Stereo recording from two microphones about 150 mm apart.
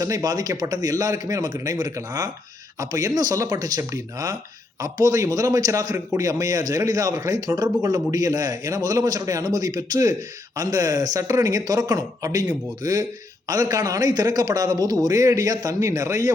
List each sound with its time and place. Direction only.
0.0 s a man's voice: 25° right (ahead or behind)